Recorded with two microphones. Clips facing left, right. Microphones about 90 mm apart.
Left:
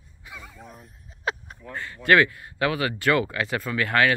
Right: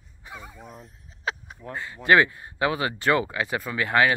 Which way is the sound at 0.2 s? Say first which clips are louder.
Right 2 dB; 30° right (ahead or behind).